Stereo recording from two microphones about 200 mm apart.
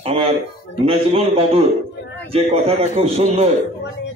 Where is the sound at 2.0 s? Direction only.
60° left (ahead or behind).